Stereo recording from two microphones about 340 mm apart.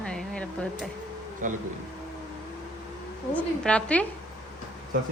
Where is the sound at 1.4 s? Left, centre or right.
Right.